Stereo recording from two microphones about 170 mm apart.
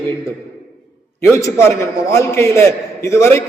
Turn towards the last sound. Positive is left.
turn(degrees=15)  # may be behind; listen again after turning